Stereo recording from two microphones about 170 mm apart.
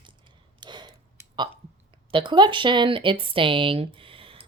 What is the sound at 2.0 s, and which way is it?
Speech, 30° right (ahead or behind).